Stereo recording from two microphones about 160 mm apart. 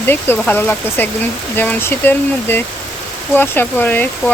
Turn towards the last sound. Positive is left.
turn(degrees=10)  # may be behind; listen again after turning